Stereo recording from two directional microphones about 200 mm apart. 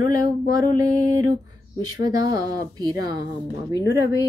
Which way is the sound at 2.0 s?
20° right (ahead or behind).